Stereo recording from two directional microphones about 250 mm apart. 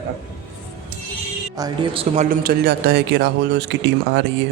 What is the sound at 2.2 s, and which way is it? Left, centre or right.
Speech, right.